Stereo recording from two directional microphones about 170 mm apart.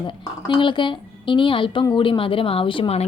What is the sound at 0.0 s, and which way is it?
A woman's voice, 30° left (ahead or behind).